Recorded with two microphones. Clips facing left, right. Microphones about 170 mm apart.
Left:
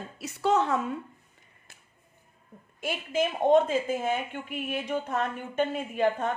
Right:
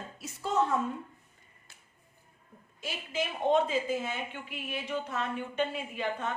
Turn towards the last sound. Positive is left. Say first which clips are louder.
# left 8 dB
turn(degrees=45)  # may be behind; listen again after turning